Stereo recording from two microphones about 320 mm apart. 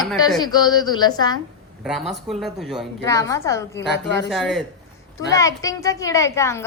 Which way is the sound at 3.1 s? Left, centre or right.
Centre.